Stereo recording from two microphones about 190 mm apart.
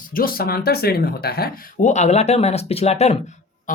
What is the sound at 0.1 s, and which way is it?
Speech, 50° left (ahead or behind).